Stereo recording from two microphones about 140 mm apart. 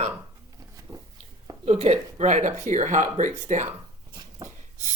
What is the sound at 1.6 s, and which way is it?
Speech, 45° right (ahead or behind).